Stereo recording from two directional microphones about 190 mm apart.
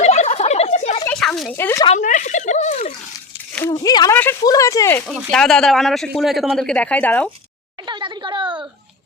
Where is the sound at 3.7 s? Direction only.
20° left (ahead or behind).